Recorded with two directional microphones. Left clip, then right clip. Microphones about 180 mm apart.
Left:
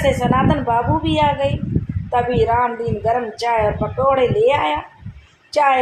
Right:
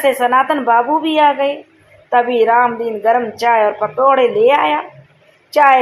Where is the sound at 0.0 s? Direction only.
25° right (ahead or behind).